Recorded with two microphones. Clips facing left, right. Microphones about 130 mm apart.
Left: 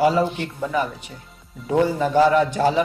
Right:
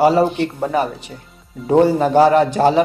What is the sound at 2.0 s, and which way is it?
Speech, 55° right (ahead or behind).